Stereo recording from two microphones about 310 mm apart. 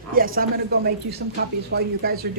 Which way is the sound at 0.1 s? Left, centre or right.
Right.